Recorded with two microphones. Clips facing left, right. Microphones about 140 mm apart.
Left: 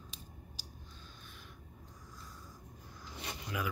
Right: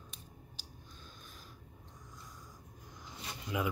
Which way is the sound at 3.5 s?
25° right (ahead or behind).